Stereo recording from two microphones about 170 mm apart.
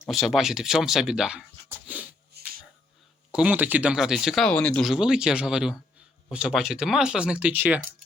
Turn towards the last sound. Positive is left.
turn(degrees=-10)  # may be behind; listen again after turning